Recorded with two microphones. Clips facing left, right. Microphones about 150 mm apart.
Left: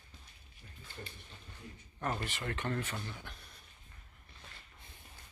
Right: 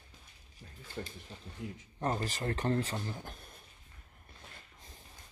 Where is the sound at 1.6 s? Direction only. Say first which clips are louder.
Right 10 dB; 90° right.